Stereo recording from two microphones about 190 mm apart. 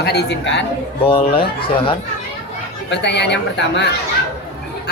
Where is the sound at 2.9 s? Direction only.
65° left (ahead or behind).